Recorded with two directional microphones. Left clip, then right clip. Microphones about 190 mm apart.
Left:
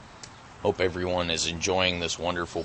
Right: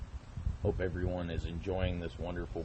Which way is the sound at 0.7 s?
20° left (ahead or behind).